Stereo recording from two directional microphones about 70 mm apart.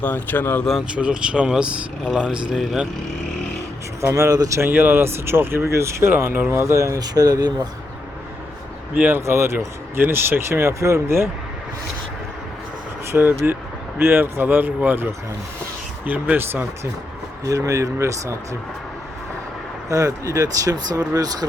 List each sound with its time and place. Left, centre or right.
0.0 s speech: left
0.9 s speech: centre
4.0 s speech: right
4.7 s speech: right
7.0 s speech: right
9.0 s speech: right
13.1 s speech: right
17.4 s speech: right
19.9 s speech: right